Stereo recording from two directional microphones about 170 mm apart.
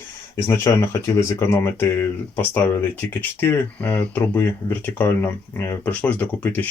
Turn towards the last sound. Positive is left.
turn(degrees=10)  # may be behind; listen again after turning